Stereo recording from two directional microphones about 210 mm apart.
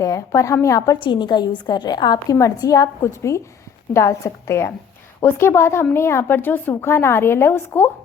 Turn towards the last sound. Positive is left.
turn(degrees=10)  # may be behind; listen again after turning